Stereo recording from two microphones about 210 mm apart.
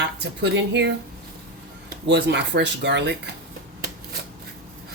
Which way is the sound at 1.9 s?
55° right (ahead or behind).